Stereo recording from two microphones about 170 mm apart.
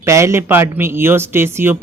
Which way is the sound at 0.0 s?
15° right (ahead or behind).